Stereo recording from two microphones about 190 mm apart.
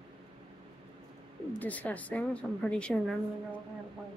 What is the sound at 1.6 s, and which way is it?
Speech, 10° left (ahead or behind).